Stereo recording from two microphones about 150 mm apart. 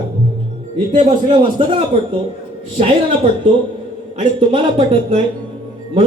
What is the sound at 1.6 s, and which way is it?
Speech, 35° right (ahead or behind).